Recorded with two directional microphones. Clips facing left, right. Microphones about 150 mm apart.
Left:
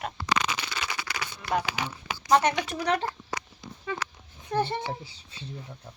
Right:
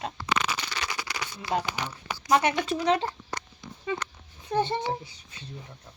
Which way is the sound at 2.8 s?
25° right (ahead or behind).